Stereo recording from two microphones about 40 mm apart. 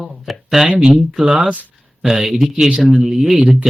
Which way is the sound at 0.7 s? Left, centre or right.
Centre.